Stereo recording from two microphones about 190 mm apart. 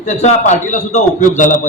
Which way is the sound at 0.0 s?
40° left (ahead or behind).